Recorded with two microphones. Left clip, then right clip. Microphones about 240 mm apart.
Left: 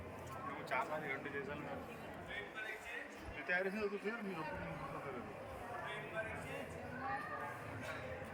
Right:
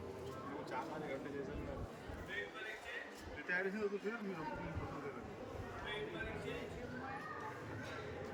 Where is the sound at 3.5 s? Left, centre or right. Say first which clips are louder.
Left 1 dB; left.